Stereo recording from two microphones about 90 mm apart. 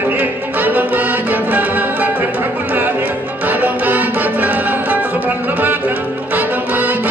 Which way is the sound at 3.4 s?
20° right (ahead or behind).